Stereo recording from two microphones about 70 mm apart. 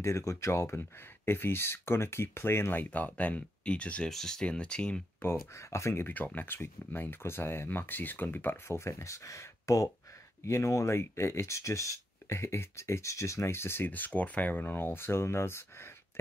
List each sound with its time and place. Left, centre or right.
0.0 s speech: left; by 4.1 s centre
4.1 s speech: centre
5.2 s speech: left
6.0 s speech: left
8.7 s speech: left